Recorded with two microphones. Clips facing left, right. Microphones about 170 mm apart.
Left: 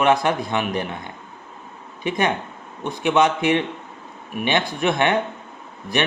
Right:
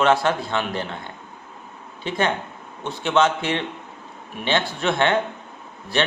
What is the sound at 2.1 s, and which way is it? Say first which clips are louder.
A man's voice: left 1 dB; 15° left (ahead or behind).